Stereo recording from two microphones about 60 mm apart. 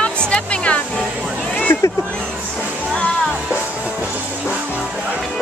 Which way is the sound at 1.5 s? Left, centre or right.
Left.